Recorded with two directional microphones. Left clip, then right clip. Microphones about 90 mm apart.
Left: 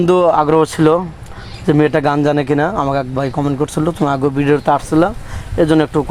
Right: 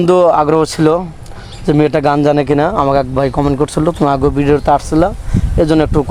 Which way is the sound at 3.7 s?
35° right (ahead or behind).